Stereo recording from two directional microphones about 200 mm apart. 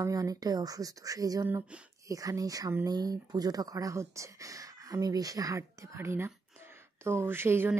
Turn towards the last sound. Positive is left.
turn(degrees=-10)  # may be behind; listen again after turning